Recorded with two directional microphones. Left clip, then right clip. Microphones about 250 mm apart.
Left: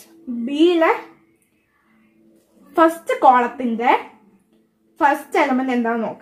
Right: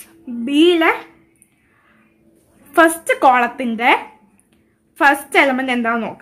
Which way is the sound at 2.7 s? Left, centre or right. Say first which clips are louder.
Right 3 dB; right.